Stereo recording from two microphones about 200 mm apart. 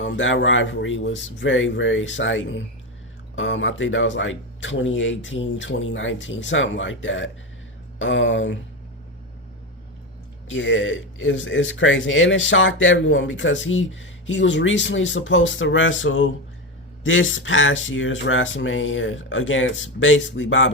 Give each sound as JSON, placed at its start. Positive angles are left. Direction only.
{"t": 0.0, "sound": "speech", "side_deg": 70}
{"t": 10.5, "sound": "speech", "side_deg": 70}